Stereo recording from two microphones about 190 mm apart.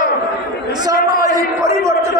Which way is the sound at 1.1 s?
20° right (ahead or behind).